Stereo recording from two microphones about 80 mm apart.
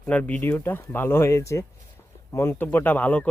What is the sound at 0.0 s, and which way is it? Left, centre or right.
Speech, centre.